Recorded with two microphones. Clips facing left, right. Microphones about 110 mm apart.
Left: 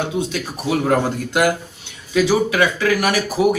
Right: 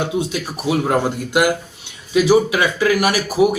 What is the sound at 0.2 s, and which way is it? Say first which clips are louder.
Speech: right 1 dB; 10° right (ahead or behind).